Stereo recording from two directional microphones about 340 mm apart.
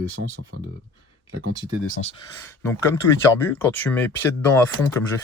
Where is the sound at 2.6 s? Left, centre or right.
Centre.